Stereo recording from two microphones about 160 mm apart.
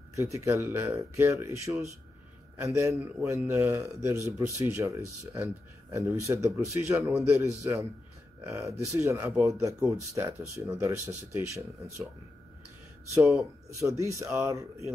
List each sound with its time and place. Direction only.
0.1 s a man's voice: 20° right (ahead or behind)
13.7 s speech: 20° right (ahead or behind)